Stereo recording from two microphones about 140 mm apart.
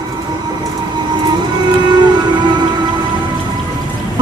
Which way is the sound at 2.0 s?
30° right (ahead or behind).